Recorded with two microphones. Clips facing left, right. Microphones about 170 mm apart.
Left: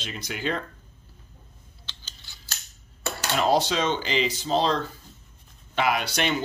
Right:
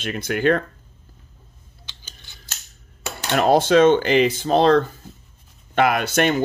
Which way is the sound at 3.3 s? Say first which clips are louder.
Right 8 dB; 55° right (ahead or behind).